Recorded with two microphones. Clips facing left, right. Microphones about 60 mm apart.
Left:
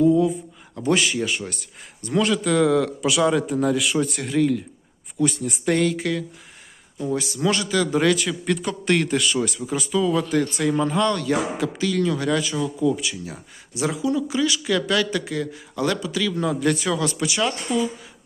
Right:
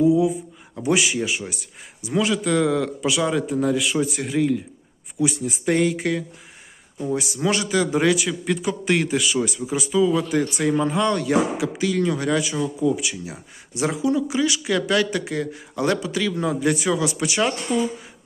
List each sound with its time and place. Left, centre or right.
0.0 s a man's voice: centre
5.8 s a man's voice: right; by 10.3 s centre
10.3 s speech: right
17.2 s speech: right